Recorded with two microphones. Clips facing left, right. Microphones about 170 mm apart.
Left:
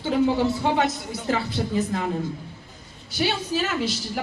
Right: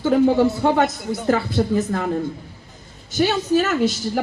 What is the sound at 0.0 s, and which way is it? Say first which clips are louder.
A woman's voice: right 5 dB; 50° right (ahead or behind).